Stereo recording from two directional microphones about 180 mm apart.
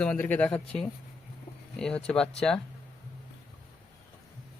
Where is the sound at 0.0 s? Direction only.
10° left (ahead or behind).